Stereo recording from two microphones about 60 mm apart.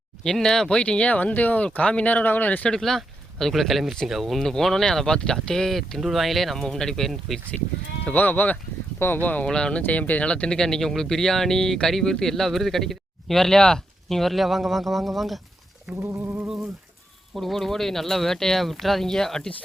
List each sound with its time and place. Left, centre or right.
0.3 s speech: centre; by 2.6 s left
2.6 s speech: centre
8.0 s speech: left
9.5 s speech: centre
9.8 s speech: left; by 15.4 s centre
16.0 s a sound: right
17.3 s speech: centre